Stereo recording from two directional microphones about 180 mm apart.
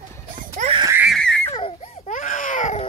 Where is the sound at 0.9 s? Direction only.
10° right (ahead or behind).